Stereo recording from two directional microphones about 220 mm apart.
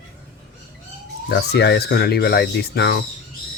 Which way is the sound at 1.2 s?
50° left (ahead or behind).